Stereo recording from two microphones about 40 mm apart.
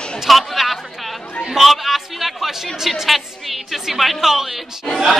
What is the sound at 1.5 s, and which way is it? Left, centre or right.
Chatter, centre.